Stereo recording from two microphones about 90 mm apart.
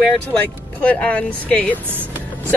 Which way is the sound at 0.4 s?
15° left (ahead or behind).